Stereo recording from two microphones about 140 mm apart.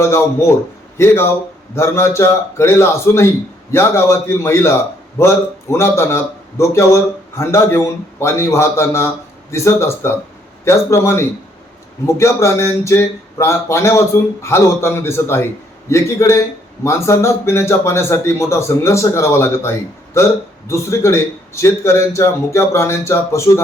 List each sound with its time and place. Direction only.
0.0 s a man's voice: 20° left (ahead or behind)